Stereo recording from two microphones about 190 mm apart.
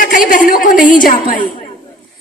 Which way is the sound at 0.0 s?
45° left (ahead or behind).